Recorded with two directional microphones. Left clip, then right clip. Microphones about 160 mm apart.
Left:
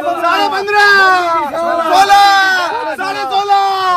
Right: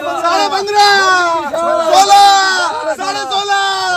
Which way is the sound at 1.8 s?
5° left (ahead or behind).